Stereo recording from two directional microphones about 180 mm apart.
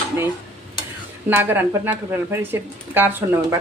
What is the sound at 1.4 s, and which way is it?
Speech, 10° right (ahead or behind).